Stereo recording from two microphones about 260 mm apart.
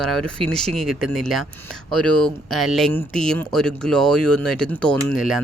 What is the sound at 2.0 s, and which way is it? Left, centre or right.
Speech, right.